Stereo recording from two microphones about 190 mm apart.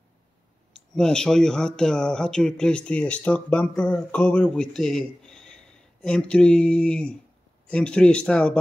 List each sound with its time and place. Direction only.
0.7 s speech: 5° left (ahead or behind)